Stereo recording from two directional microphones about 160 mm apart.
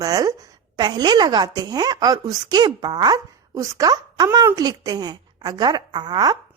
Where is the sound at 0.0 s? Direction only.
20° right (ahead or behind).